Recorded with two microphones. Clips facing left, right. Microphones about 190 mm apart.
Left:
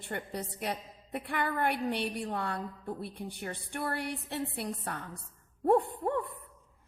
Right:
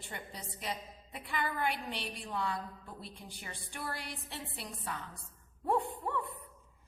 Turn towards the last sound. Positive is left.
turn(degrees=55)  # may be behind; listen again after turning